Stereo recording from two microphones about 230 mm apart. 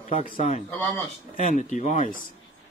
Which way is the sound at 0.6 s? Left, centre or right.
Centre.